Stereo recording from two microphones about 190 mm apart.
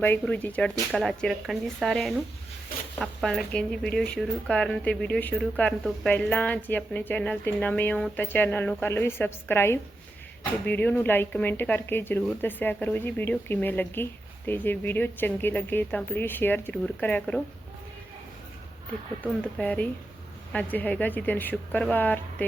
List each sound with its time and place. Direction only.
0.0 s speech: 10° left (ahead or behind)
19.5 s speech: 5° left (ahead or behind)